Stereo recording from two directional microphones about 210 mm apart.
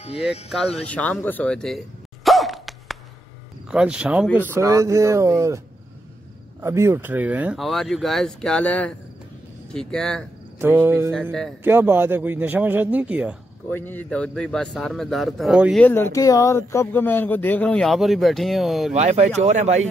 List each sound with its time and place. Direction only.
0.8 s speech: 5° left (ahead or behind)
2.2 s a sound: centre (ahead or behind)
3.7 s a man's voice: 5° right (ahead or behind)
6.6 s speech: 10° right (ahead or behind); by 10.2 s 5° left (ahead or behind)
10.6 s a man's voice: 10° right (ahead or behind)
13.7 s speech: 10° left (ahead or behind)
15.8 s speech: 10° left (ahead or behind)
18.9 s speech: 30° right (ahead or behind)